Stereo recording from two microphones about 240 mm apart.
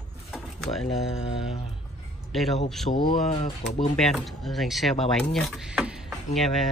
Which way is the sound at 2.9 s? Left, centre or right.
Left.